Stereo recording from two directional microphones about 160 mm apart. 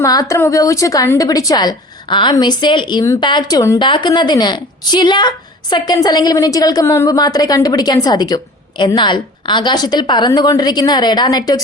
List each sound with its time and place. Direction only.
0.0 s a woman's voice: 20° left (ahead or behind)